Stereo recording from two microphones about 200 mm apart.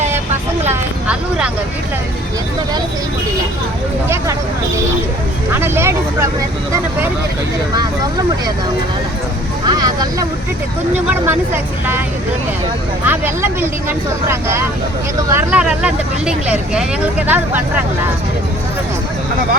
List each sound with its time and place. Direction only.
0.7 s a sound: 5° right (ahead or behind)
5.5 s speech: 10° right (ahead or behind)
9.6 s speech: 20° right (ahead or behind)
13.1 s speech: 10° right (ahead or behind)